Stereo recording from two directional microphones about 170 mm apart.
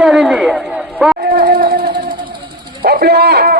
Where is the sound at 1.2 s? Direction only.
60° right (ahead or behind).